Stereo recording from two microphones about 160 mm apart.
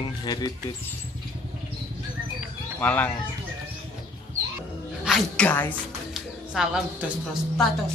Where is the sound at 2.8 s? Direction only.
10° left (ahead or behind).